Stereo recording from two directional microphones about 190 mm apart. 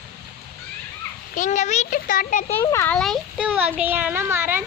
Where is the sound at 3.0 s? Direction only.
Centre (ahead or behind).